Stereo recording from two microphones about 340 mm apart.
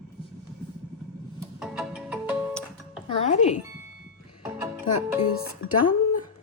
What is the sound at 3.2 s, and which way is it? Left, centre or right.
Music, left.